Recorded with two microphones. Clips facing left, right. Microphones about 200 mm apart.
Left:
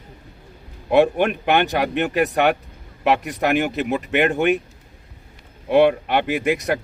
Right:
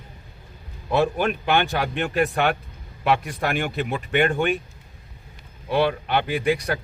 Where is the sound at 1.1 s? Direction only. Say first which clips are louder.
Left 3 dB; 60° left (ahead or behind).